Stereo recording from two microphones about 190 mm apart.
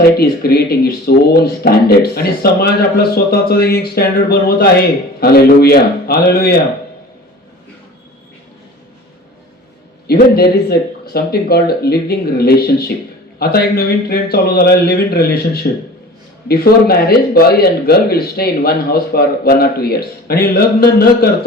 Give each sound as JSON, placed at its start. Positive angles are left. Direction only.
{"t": 0.2, "sound": "a man's voice", "side_deg": 55}
{"t": 10.3, "sound": "a man's voice", "side_deg": 55}
{"t": 15.6, "sound": "a man's voice", "side_deg": 45}
{"t": 16.5, "sound": "a man's voice", "side_deg": 55}